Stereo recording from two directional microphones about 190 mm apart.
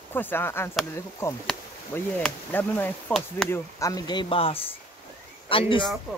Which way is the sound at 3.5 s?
15° left (ahead or behind).